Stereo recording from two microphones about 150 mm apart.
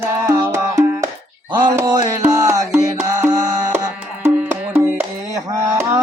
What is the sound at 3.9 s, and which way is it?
Music, 10° right (ahead or behind).